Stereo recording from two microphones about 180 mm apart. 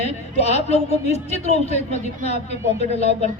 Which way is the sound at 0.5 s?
35° left (ahead or behind).